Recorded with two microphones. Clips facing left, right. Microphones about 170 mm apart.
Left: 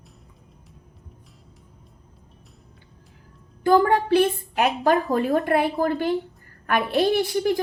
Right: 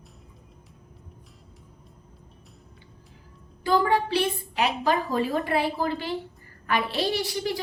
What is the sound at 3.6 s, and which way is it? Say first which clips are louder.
A woman's voice: left 5 dB; 50° left (ahead or behind).